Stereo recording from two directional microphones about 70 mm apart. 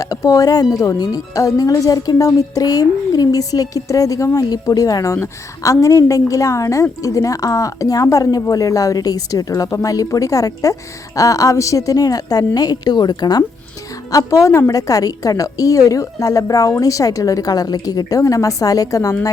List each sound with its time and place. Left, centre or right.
0.0 s speech: left
5.1 s a woman's voice: left
14.1 s speech: left